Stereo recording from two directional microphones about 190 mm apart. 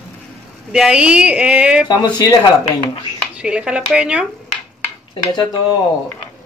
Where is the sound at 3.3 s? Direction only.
5° right (ahead or behind).